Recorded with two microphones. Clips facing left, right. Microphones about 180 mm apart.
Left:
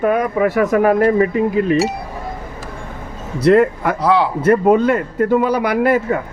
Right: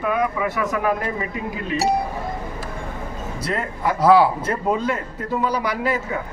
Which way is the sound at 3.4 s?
65° left (ahead or behind).